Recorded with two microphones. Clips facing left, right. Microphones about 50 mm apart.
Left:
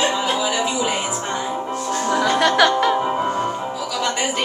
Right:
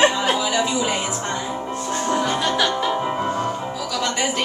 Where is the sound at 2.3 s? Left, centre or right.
Left.